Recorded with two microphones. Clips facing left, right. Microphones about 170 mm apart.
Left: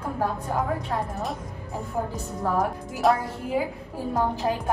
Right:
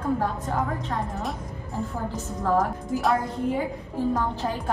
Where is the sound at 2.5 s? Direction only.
Centre (ahead or behind).